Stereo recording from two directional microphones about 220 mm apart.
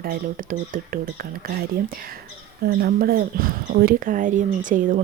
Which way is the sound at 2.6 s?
45° right (ahead or behind).